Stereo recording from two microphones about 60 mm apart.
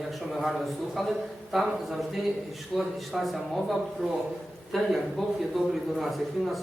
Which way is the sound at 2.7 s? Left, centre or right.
Centre.